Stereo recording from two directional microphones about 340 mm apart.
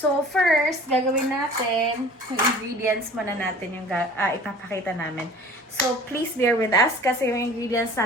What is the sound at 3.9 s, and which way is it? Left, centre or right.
A woman's voice, centre.